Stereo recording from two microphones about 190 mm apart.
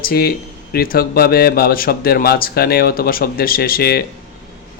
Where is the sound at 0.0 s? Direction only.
55° left (ahead or behind).